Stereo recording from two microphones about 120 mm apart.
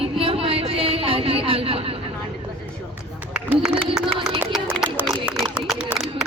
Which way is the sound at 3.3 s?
10° right (ahead or behind).